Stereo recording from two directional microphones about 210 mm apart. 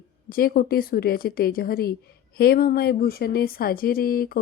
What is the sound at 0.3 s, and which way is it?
Speech, 45° left (ahead or behind).